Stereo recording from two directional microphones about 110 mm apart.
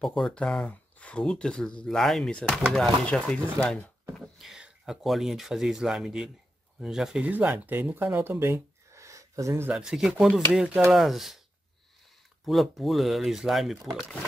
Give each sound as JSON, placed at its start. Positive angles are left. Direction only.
{"t": 0.0, "sound": "speech", "side_deg": 0}
{"t": 4.2, "sound": "speech", "side_deg": -5}
{"t": 9.8, "sound": "speech", "side_deg": -5}
{"t": 12.4, "sound": "speech", "side_deg": 0}